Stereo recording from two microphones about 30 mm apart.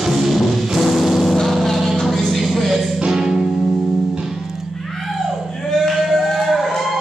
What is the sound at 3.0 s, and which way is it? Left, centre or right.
Music, centre.